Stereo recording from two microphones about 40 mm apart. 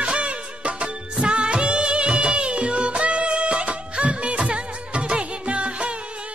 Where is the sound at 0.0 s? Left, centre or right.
Right.